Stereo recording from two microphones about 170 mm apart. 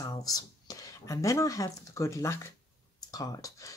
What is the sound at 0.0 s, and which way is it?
Speech, 20° left (ahead or behind).